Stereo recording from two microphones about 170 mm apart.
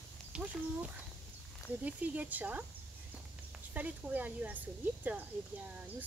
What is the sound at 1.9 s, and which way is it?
Speech, 10° right (ahead or behind).